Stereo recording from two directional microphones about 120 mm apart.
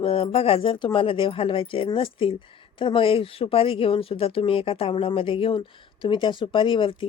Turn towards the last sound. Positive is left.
turn(degrees=45)  # may be behind; listen again after turning